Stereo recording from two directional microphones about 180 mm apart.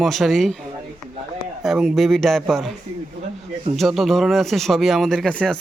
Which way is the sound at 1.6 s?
Centre (ahead or behind).